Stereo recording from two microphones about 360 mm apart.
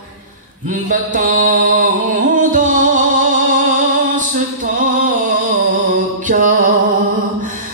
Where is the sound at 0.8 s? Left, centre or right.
Right.